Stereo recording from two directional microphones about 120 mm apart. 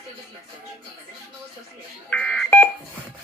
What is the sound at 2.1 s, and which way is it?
Telephone dialing, 10° left (ahead or behind).